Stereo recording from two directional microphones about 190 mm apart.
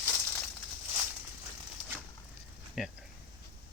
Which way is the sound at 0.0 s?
5° left (ahead or behind).